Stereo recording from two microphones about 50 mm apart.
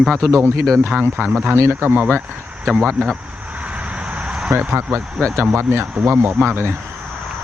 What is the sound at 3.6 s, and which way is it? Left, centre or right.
Vehicle, right.